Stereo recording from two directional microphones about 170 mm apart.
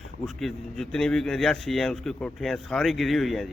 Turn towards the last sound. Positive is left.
turn(degrees=0)  # may be behind; listen again after turning